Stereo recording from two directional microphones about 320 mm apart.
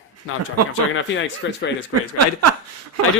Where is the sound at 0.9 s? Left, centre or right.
Left.